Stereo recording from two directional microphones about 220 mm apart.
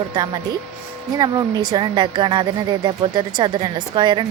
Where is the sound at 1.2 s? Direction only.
15° right (ahead or behind).